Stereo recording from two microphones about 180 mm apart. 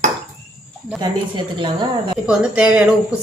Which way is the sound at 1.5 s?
25° right (ahead or behind).